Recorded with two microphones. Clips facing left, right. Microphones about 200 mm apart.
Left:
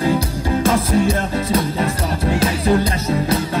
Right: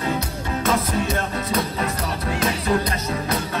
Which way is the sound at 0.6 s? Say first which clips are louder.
Left 5 dB; 30° left (ahead or behind).